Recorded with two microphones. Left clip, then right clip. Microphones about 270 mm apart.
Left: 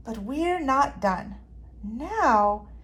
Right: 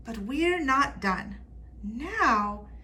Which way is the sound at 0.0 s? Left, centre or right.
Centre.